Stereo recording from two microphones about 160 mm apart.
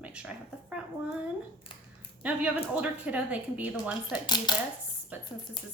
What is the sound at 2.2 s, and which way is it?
A woman's voice, 5° right (ahead or behind).